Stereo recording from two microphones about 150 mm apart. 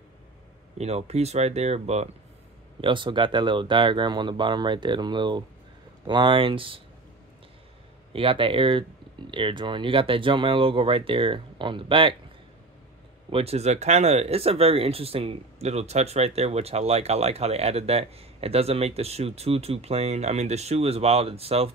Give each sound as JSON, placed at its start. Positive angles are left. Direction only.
{"t": 0.7, "sound": "speech", "side_deg": -45}
{"t": 2.8, "sound": "speech", "side_deg": -35}
{"t": 8.1, "sound": "speech", "side_deg": -35}
{"t": 13.3, "sound": "speech", "side_deg": -40}